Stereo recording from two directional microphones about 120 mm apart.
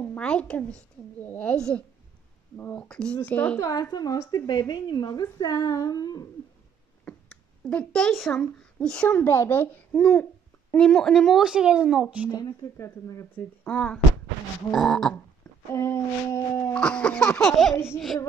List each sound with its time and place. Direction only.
0.0 s a woman's voice: 10° left (ahead or behind)
3.9 s speech: 30° left (ahead or behind)
7.1 s a sound: 10° left (ahead or behind)
8.4 s a child's voice: 10° left (ahead or behind); by 12.3 s 5° right (ahead or behind)
12.3 s speech: 30° left (ahead or behind)
13.7 s a child's voice: 10° left (ahead or behind)
15.7 s speech: 25° left (ahead or behind)
16.7 s a child's voice: 10° left (ahead or behind)